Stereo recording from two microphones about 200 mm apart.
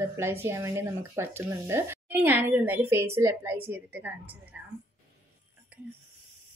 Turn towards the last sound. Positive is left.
turn(degrees=-10)  # may be behind; listen again after turning